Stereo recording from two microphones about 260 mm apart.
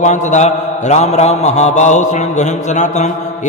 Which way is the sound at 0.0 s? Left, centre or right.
Left.